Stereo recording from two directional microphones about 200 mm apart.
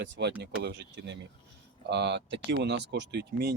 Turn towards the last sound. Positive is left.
turn(degrees=-55)  # may be behind; listen again after turning